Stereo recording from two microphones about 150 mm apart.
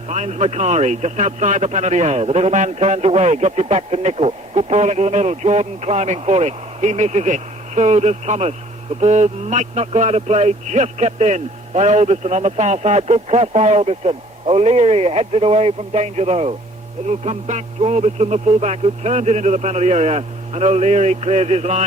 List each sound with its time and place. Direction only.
0.1 s speech: 50° right (ahead or behind)